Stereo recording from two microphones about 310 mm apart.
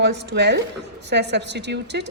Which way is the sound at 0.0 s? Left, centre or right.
Right.